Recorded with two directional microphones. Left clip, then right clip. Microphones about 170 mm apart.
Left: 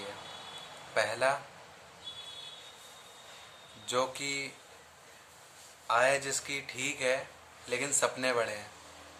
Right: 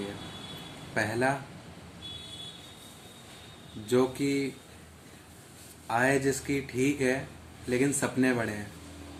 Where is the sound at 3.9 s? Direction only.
15° left (ahead or behind).